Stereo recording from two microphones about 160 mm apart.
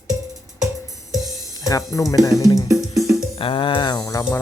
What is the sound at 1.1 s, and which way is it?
Music, centre (ahead or behind).